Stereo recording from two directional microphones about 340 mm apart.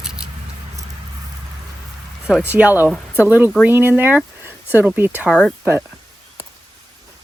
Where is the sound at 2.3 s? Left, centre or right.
Centre.